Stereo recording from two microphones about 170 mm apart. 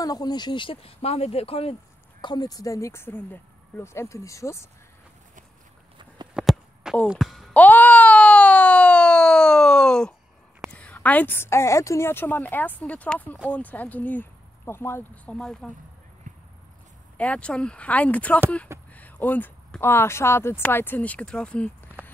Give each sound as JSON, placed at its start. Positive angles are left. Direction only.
{"t": 0.0, "sound": "speech", "side_deg": 20}
{"t": 2.2, "sound": "speech", "side_deg": 25}
{"t": 6.3, "sound": "a sound", "side_deg": 0}
{"t": 10.7, "sound": "speech", "side_deg": 10}
{"t": 16.3, "sound": "a sound", "side_deg": -50}
{"t": 17.2, "sound": "speech", "side_deg": 5}